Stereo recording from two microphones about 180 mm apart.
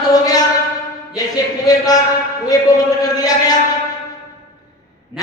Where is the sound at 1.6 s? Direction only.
20° left (ahead or behind).